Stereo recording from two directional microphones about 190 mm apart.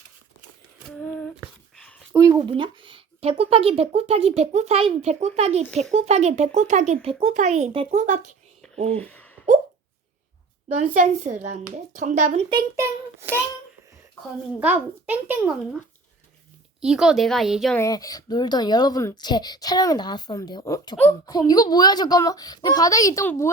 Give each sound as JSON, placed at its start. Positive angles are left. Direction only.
{"t": 0.9, "sound": "humming", "side_deg": 5}
{"t": 1.7, "sound": "a sound", "side_deg": 5}
{"t": 2.1, "sound": "a woman's voice", "side_deg": -20}
{"t": 8.6, "sound": "a sound", "side_deg": 0}
{"t": 10.8, "sound": "a woman's voice", "side_deg": -35}
{"t": 12.7, "sound": "speech", "side_deg": -15}
{"t": 14.6, "sound": "speech", "side_deg": -10}
{"t": 16.8, "sound": "speech", "side_deg": -5}
{"t": 17.7, "sound": "a woman's voice", "side_deg": 15}